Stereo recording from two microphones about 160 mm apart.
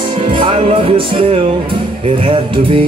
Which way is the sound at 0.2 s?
30° right (ahead or behind).